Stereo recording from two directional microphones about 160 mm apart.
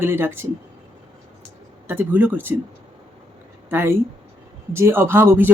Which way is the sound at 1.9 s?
10° right (ahead or behind).